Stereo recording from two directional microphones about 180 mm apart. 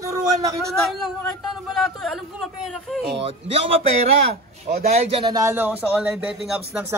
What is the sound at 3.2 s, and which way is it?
Speech, 35° right (ahead or behind).